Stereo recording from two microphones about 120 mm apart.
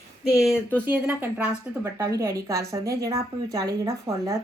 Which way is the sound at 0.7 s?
15° right (ahead or behind).